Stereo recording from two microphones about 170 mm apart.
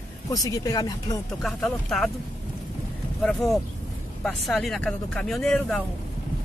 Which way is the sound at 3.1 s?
Centre (ahead or behind).